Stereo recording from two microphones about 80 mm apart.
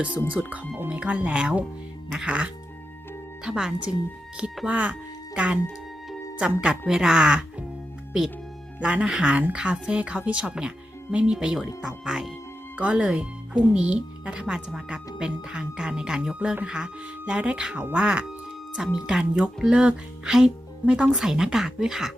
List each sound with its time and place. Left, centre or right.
0.3 s speech: centre
8.8 s speech: centre